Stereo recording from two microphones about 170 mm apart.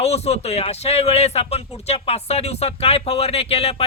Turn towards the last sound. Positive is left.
turn(degrees=35)  # may be behind; listen again after turning